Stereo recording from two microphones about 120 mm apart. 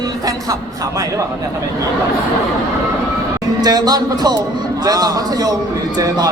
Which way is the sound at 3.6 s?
35° right (ahead or behind).